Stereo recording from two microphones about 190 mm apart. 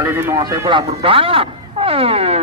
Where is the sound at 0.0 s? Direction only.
10° right (ahead or behind).